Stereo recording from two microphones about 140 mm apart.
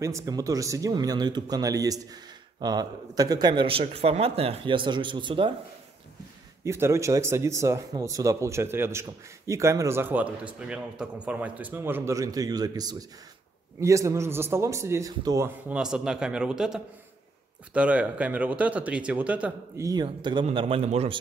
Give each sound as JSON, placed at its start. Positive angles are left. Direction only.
{"t": 0.0, "sound": "speech", "side_deg": -25}
{"t": 6.6, "sound": "speech", "side_deg": -20}
{"t": 15.7, "sound": "a man's voice", "side_deg": -5}
{"t": 19.8, "sound": "a man's voice", "side_deg": -30}